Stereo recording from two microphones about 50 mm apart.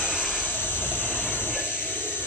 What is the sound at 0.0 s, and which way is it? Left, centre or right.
Vehicle, centre.